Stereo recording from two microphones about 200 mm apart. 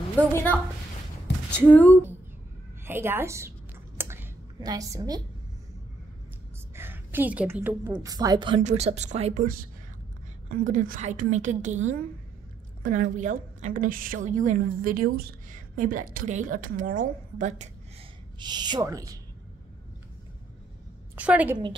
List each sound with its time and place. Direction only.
0.2 s speech: 10° left (ahead or behind)
2.8 s a woman's voice: 10° right (ahead or behind)
4.0 s a sound: 10° right (ahead or behind)
6.7 s a sound: 10° right (ahead or behind)
7.9 s speech: 20° right (ahead or behind)
8.6 s a woman's voice: 35° right (ahead or behind)
18.4 s speech: 20° right (ahead or behind)
21.2 s a woman's voice: 5° right (ahead or behind)